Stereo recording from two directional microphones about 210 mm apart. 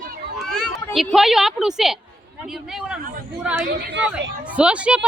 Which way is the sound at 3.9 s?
60° right (ahead or behind).